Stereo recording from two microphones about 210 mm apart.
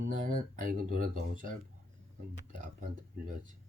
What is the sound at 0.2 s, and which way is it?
Speech, 40° right (ahead or behind).